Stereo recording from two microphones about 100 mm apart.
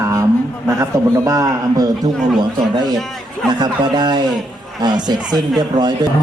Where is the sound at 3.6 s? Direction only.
45° right (ahead or behind).